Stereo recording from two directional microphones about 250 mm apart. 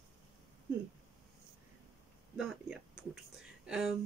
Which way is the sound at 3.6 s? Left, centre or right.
Centre.